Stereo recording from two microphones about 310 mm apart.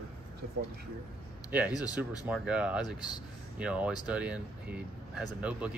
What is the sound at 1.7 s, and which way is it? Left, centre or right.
Speech, centre.